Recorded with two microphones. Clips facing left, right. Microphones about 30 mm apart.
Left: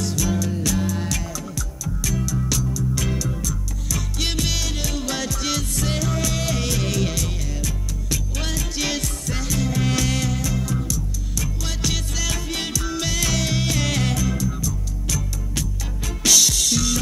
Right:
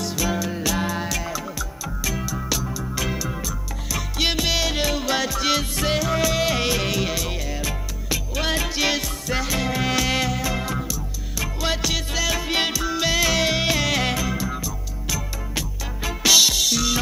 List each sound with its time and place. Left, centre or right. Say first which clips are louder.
0.0 s music: even; centre
2.1 s music: left 2 dB; right